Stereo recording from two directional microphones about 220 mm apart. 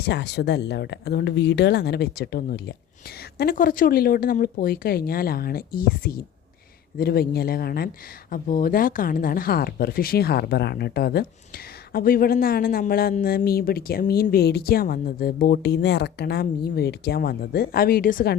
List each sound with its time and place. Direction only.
0.0 s speech: 50° left (ahead or behind)